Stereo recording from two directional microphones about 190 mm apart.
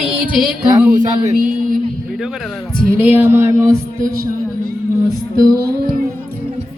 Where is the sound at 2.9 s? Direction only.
10° right (ahead or behind).